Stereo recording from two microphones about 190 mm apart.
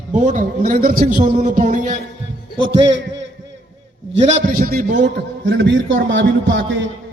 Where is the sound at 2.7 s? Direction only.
30° right (ahead or behind).